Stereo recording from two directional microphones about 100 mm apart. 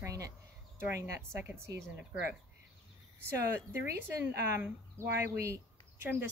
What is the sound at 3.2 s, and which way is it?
A woman's voice, 25° right (ahead or behind).